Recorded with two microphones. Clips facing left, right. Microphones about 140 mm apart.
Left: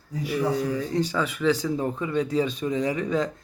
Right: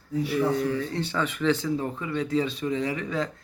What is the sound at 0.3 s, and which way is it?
Speech, 15° left (ahead or behind).